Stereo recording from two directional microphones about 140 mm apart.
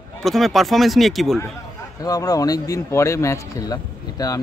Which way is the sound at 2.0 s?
25° left (ahead or behind).